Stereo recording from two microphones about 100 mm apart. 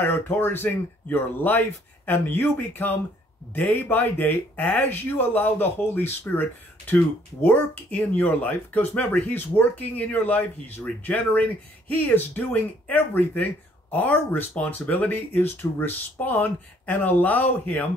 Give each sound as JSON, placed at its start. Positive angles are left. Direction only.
{"t": 0.0, "sound": "speech", "side_deg": 20}
{"t": 7.4, "sound": "speech", "side_deg": 20}